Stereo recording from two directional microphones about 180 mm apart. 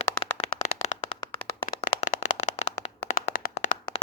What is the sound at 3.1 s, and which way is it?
Clapping, 50° left (ahead or behind).